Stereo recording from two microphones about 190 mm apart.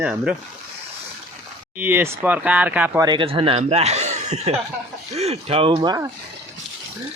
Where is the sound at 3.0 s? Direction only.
25° right (ahead or behind).